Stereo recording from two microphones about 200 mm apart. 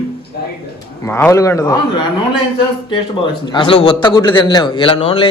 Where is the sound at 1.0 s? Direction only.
15° left (ahead or behind).